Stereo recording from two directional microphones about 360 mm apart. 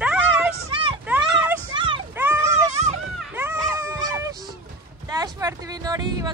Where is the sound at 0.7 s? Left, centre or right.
Centre.